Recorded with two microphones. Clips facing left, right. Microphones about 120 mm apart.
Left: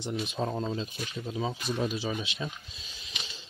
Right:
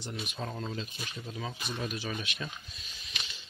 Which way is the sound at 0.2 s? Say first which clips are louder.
Left 6 dB; 30° left (ahead or behind).